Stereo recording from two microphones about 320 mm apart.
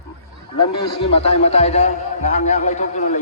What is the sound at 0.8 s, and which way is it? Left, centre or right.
A man's voice, centre.